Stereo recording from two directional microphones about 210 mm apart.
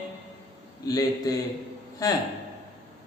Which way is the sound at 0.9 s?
15° left (ahead or behind).